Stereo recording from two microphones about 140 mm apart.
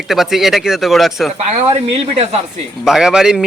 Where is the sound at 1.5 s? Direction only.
45° right (ahead or behind).